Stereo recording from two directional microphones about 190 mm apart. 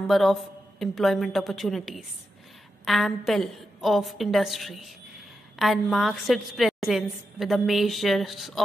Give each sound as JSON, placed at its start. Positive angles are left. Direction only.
{"t": 0.1, "sound": "a woman's voice", "side_deg": 0}